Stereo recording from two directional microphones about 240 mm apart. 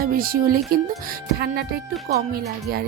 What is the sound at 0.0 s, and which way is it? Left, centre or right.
Speech, right.